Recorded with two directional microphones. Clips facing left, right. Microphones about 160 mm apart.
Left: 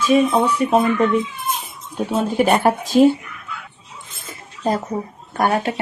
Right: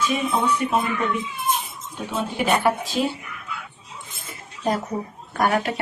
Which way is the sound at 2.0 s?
40° left (ahead or behind).